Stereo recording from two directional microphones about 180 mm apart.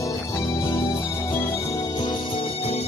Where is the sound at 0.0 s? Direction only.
15° left (ahead or behind).